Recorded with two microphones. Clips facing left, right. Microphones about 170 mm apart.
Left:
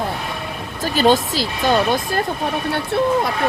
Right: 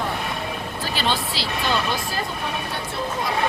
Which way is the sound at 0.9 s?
45° left (ahead or behind).